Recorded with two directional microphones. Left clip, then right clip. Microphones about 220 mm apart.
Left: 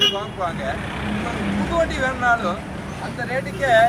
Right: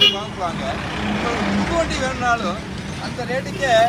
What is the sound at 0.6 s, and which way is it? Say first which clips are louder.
Speech: right 2 dB; 40° right (ahead or behind).